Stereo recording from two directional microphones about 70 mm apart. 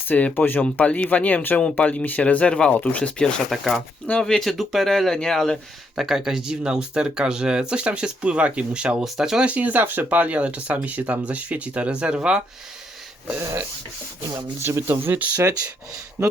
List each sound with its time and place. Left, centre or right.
0.1 s speech: left
3.5 s speech: centre
4.0 s speech: centre
6.0 s speech: centre
9.5 s speech: right
14.6 s speech: right
14.8 s speech: right
16.2 s speech: right